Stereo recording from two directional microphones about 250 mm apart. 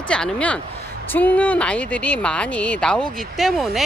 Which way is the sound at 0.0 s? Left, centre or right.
Centre.